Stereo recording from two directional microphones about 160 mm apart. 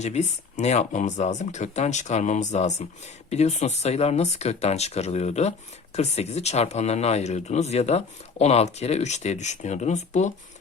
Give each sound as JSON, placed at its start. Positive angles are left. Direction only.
{"t": 0.0, "sound": "speech", "side_deg": 45}